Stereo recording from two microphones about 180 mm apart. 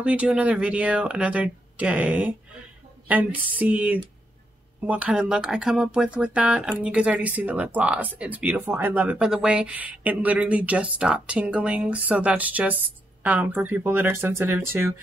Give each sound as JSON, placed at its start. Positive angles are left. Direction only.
{"t": 0.0, "sound": "speech", "side_deg": -5}